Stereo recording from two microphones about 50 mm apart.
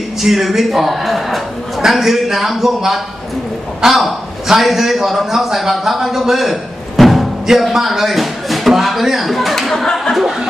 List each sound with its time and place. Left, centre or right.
0.2 s a man's voice: centre